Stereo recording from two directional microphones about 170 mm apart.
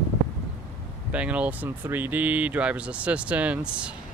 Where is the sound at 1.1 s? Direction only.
5° right (ahead or behind).